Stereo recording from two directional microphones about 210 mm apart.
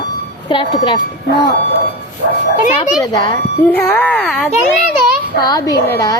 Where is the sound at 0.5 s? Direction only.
20° left (ahead or behind).